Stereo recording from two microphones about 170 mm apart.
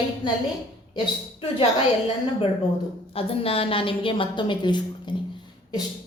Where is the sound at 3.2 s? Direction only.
35° left (ahead or behind).